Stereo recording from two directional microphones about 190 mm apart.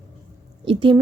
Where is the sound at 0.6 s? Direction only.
25° right (ahead or behind).